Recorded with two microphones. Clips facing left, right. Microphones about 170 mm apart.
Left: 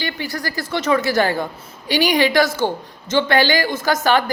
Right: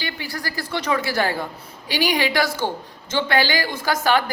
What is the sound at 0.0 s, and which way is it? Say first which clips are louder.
A woman's voice: left 4 dB; 10° right (ahead or behind).